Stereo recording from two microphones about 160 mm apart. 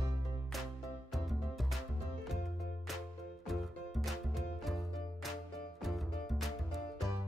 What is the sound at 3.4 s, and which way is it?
Music, centre (ahead or behind).